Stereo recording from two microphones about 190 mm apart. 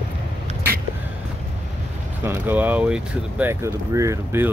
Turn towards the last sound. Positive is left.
turn(degrees=-15)  # may be behind; listen again after turning